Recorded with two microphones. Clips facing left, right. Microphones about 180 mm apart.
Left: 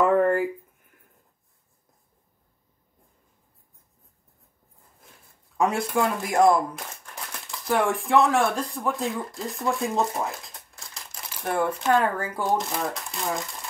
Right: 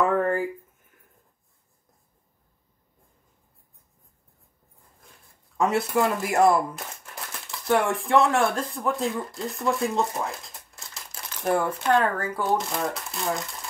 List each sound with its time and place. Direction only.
0.0 s a sound: 10° left (ahead or behind)
5.6 s speech: centre (ahead or behind)
12.0 s speech: 10° left (ahead or behind)
12.4 s speech: centre (ahead or behind)